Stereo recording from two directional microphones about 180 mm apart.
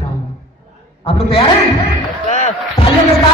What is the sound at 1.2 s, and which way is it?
Speech, 30° left (ahead or behind).